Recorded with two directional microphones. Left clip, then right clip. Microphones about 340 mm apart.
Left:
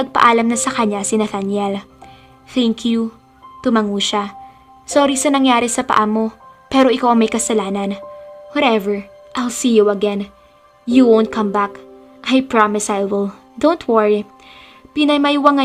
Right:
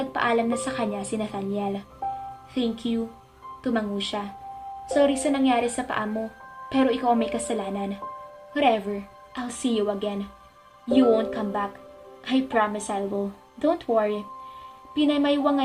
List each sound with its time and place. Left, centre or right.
0.1 s a woman's voice: left